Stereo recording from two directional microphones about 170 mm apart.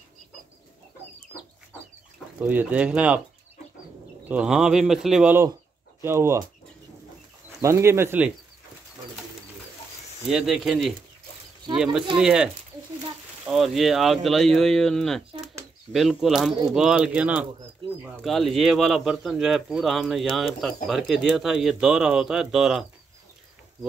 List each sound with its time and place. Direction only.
2.4 s speech: 5° right (ahead or behind)
4.3 s speech: 5° right (ahead or behind)
7.6 s speech: 15° right (ahead or behind)
10.2 s speech: 5° right (ahead or behind)
13.5 s speech: centre (ahead or behind)